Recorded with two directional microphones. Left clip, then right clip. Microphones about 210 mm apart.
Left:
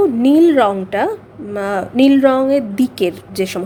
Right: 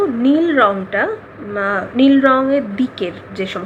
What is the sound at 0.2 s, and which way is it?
A woman's voice, 55° left (ahead or behind).